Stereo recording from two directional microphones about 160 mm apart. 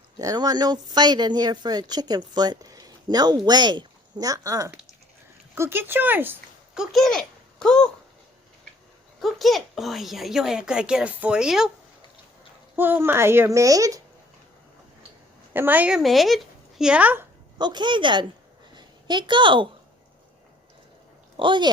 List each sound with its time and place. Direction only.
0.2 s speech: 25° right (ahead or behind)
6.9 s a child's voice: centre (ahead or behind)
9.2 s speech: centre (ahead or behind)
12.7 s speech: 15° right (ahead or behind)
15.5 s speech: 10° right (ahead or behind)
17.6 s a woman's voice: 30° right (ahead or behind)
21.3 s speech: 30° right (ahead or behind)